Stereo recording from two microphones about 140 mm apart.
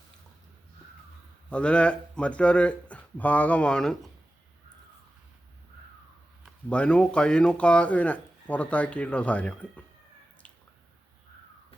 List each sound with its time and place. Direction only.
1.5 s speech: 10° left (ahead or behind)
6.7 s speech: 10° left (ahead or behind)